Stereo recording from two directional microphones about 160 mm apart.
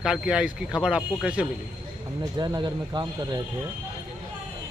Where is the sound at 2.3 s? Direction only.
25° right (ahead or behind).